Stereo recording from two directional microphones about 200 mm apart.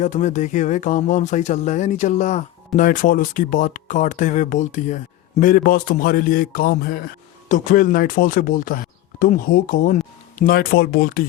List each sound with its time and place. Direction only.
0.0 s a man's voice: 35° left (ahead or behind)